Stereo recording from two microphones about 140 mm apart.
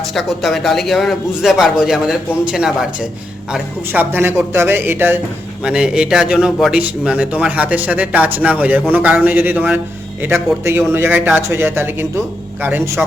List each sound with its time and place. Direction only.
0.0 s a man's voice: centre (ahead or behind); by 13.1 s 15° right (ahead or behind)